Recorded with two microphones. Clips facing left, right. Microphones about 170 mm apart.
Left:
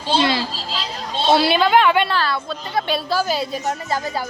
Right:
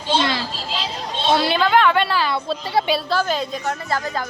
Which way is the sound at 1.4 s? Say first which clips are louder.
Left 1 dB; 10° left (ahead or behind).